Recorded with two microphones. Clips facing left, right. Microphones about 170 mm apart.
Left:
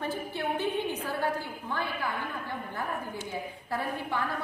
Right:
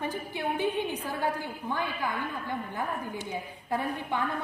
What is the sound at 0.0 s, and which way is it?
A woman's voice, 15° right (ahead or behind).